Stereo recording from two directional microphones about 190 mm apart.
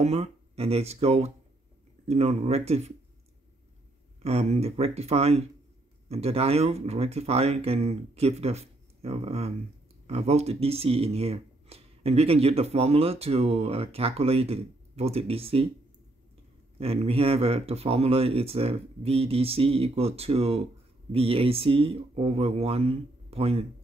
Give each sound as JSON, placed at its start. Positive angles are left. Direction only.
{"t": 0.0, "sound": "speech", "side_deg": -35}
{"t": 4.2, "sound": "speech", "side_deg": -35}
{"t": 16.7, "sound": "speech", "side_deg": -30}